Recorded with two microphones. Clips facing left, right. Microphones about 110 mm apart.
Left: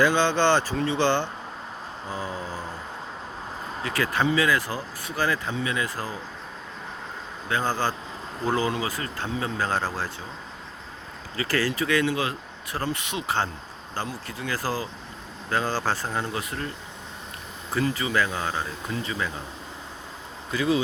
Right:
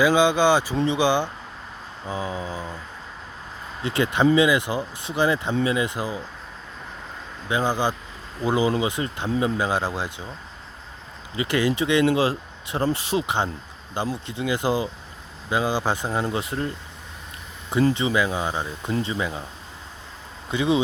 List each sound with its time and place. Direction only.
0.0 s speech: 10° right (ahead or behind)
3.8 s speech: 25° right (ahead or behind)
7.4 s speech: 15° right (ahead or behind)
11.3 s speech: 20° right (ahead or behind)
13.2 s speech: 20° right (ahead or behind)
16.2 s speech: 25° right (ahead or behind)
17.8 s speech: 25° right (ahead or behind)
18.1 s speech: 15° right (ahead or behind)
20.5 s speech: 25° right (ahead or behind)